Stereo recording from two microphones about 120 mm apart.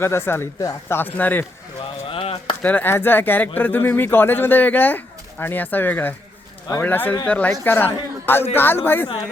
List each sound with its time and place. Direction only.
0.0 s speech: 20° left (ahead or behind)
2.0 s a sound: 50° left (ahead or behind)
2.6 s a man's voice: 15° left (ahead or behind)